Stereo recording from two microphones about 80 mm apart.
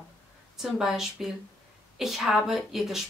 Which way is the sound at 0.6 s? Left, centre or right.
Centre.